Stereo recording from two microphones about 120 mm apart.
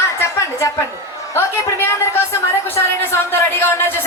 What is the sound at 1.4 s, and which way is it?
A woman's voice, 20° left (ahead or behind).